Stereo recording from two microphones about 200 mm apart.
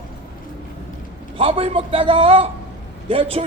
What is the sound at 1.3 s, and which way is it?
A man's voice, 30° right (ahead or behind).